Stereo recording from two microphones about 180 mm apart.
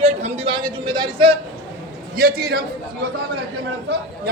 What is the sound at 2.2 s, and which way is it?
Speech, 55° right (ahead or behind).